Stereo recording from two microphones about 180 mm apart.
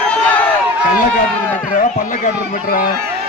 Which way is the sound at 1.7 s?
45° left (ahead or behind).